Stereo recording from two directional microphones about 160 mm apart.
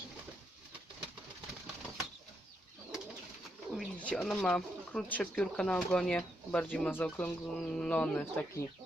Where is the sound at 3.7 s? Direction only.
10° left (ahead or behind).